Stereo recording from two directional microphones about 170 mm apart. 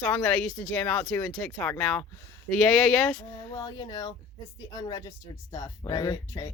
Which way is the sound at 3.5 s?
25° left (ahead or behind).